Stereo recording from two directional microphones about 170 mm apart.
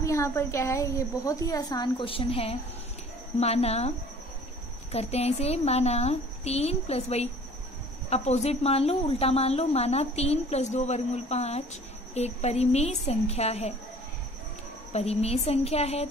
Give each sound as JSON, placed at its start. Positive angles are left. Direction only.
{"t": 0.0, "sound": "a woman's voice", "side_deg": 15}
{"t": 4.9, "sound": "a woman's voice", "side_deg": 35}
{"t": 14.9, "sound": "a woman's voice", "side_deg": 40}